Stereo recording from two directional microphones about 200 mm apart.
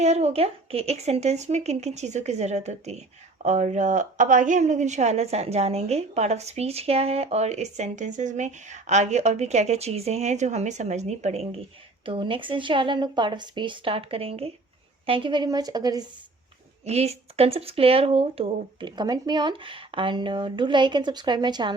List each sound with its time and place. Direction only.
0.0 s a woman's voice: 35° right (ahead or behind)
16.8 s speech: 30° right (ahead or behind)